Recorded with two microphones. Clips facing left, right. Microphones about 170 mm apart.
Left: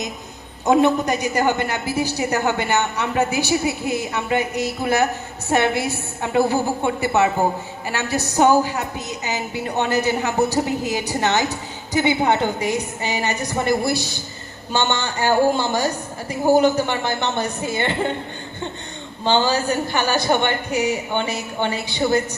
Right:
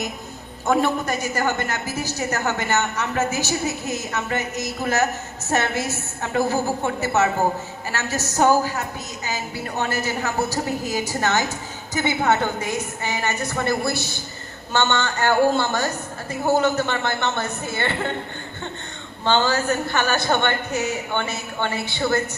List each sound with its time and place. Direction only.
0.6 s a woman's voice: 20° left (ahead or behind)
19.2 s a woman's voice: 15° left (ahead or behind)